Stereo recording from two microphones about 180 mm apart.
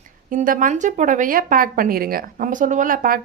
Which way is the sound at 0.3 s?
50° right (ahead or behind).